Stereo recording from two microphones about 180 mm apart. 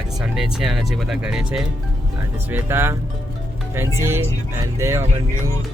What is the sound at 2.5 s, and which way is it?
Speech, 15° right (ahead or behind).